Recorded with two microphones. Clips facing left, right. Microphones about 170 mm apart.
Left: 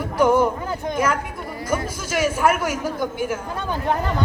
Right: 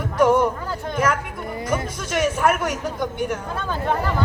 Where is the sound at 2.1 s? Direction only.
5° left (ahead or behind).